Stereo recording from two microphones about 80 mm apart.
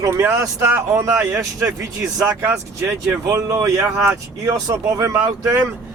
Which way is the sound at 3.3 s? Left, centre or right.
Right.